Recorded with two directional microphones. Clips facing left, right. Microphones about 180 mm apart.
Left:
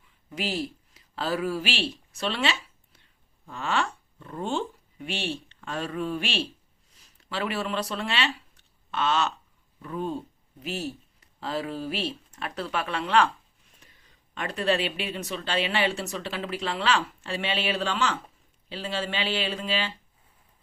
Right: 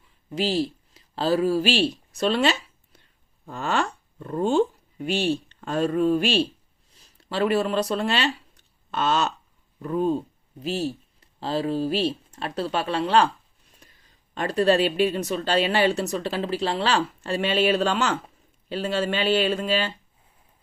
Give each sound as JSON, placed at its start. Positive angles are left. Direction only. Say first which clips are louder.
{"t": 0.3, "sound": "speech", "louder": "right 6 dB", "side_deg": -30}
{"t": 14.3, "sound": "speech", "louder": "right 6 dB", "side_deg": -35}